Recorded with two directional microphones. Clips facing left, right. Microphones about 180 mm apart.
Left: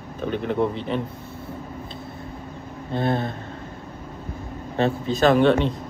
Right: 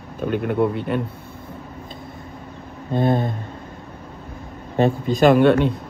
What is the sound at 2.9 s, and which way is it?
Speech, 15° right (ahead or behind).